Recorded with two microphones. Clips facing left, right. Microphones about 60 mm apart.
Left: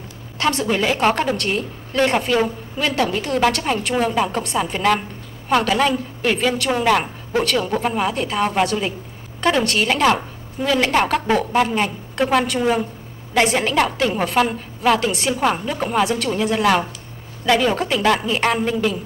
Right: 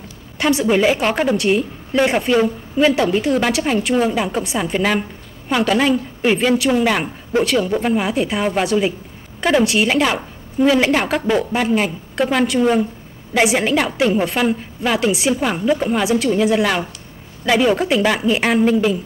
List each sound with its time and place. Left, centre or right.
0.4 s a woman's voice: centre